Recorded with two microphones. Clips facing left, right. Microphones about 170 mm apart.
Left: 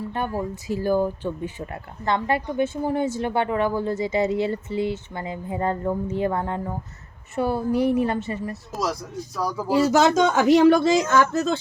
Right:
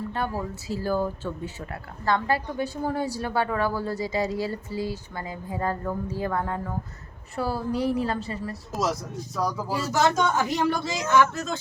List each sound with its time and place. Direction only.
0.1 s speech: 15° left (ahead or behind)
8.7 s speech: centre (ahead or behind)
9.6 s speech: 15° left (ahead or behind)
9.8 s speech: 80° left; by 11.6 s 35° left (ahead or behind)